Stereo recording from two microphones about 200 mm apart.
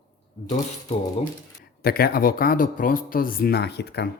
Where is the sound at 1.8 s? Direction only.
50° left (ahead or behind).